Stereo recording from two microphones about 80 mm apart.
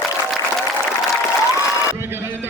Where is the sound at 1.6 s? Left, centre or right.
Right.